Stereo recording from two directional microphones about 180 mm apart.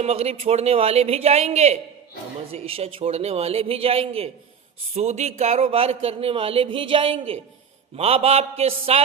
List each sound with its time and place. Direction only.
0.0 s speech: 35° right (ahead or behind)